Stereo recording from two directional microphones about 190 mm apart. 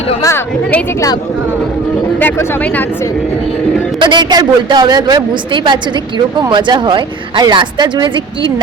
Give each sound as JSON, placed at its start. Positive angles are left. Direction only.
{"t": 0.2, "sound": "a woman's voice", "side_deg": 15}
{"t": 2.1, "sound": "a woman's voice", "side_deg": 10}
{"t": 4.0, "sound": "a woman's voice", "side_deg": -25}